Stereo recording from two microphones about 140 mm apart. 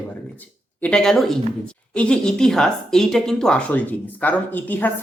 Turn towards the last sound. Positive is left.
turn(degrees=10)  # may be behind; listen again after turning